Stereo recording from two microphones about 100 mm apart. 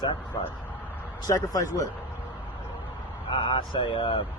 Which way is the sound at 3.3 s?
60° left (ahead or behind).